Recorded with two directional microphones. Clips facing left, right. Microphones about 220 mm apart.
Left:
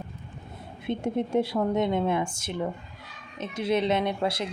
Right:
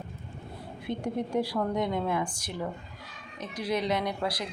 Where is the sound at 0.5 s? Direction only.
20° left (ahead or behind).